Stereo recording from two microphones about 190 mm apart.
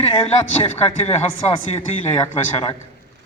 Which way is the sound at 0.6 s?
35° left (ahead or behind).